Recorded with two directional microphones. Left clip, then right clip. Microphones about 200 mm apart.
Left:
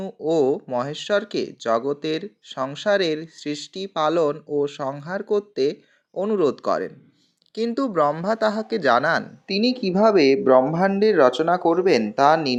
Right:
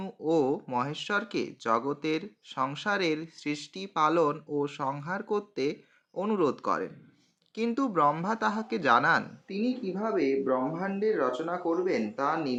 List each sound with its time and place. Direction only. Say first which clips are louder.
0.3 s speech: left 7 dB; 15° left (ahead or behind)
9.5 s speech: left 12 dB; 35° left (ahead or behind)